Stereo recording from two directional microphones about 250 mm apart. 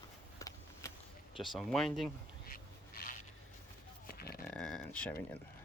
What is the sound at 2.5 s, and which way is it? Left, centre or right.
Duck, left.